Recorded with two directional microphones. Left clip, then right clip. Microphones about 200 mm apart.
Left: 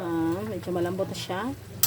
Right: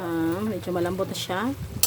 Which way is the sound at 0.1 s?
15° right (ahead or behind).